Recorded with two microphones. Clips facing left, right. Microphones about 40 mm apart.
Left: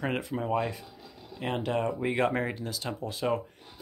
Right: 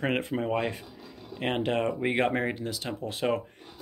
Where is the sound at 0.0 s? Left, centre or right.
Right.